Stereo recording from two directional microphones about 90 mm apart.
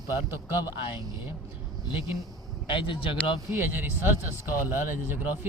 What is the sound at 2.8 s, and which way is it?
Speech, 75° left (ahead or behind).